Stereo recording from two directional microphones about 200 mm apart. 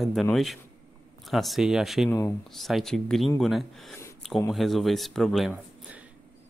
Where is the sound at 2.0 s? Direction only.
15° left (ahead or behind).